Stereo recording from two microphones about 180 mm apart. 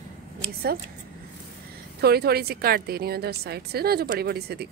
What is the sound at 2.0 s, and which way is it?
A woman's voice, 60° right (ahead or behind).